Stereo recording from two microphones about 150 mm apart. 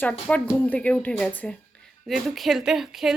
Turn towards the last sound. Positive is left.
turn(degrees=-5)  # may be behind; listen again after turning